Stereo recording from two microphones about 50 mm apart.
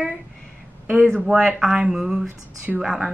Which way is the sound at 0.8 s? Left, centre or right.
Right.